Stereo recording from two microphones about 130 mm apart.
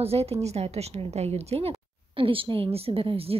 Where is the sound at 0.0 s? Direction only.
50° right (ahead or behind).